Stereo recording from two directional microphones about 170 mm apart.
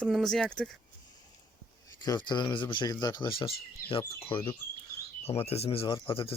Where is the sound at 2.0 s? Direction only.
25° left (ahead or behind).